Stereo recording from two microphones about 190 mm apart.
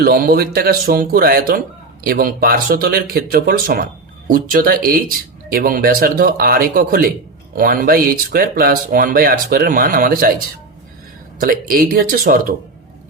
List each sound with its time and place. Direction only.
0.0 s speech: 50° right (ahead or behind)
11.3 s speech: 50° right (ahead or behind)